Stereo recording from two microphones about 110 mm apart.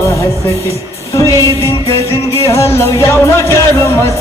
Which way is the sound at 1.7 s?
30° left (ahead or behind).